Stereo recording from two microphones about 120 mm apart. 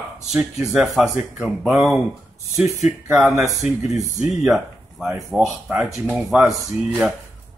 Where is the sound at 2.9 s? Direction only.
5° right (ahead or behind).